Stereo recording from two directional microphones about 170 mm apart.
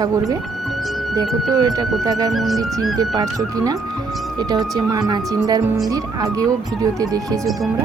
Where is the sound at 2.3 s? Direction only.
Centre (ahead or behind).